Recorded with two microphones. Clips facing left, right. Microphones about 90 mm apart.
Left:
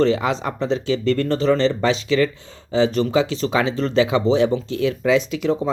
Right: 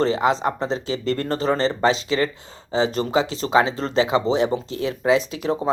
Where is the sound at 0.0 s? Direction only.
35° right (ahead or behind).